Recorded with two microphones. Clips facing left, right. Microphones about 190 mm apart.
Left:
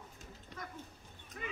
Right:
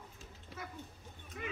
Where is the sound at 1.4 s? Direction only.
Centre (ahead or behind).